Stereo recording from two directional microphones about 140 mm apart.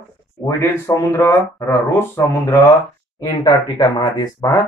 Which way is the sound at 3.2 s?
30° left (ahead or behind).